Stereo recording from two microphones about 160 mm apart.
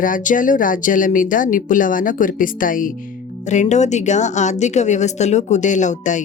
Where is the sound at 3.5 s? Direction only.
45° left (ahead or behind).